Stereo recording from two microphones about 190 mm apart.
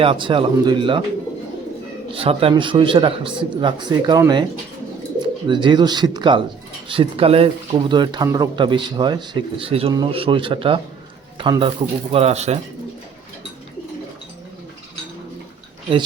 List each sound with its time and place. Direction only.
0.0 s speech: 25° right (ahead or behind)
2.1 s speech: 30° right (ahead or behind)
5.5 s speech: 25° right (ahead or behind)